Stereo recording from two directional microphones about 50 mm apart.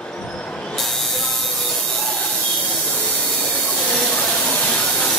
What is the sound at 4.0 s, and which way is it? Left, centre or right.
Hiss, centre.